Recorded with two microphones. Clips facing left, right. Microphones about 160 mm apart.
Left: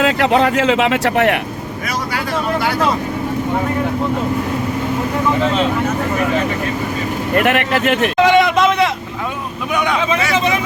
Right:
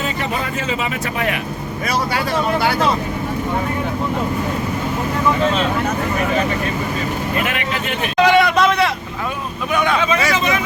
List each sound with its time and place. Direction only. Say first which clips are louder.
0.0 s speech: left 9 dB; 90° left; by 1.4 s 70° left (ahead or behind)
7.3 s speech: left 7 dB; 65° left (ahead or behind)
8.2 s a sound: even; 20° left (ahead or behind)
9.7 s speech: even; 15° left (ahead or behind)
10.3 s speech: left 3 dB; 30° left (ahead or behind)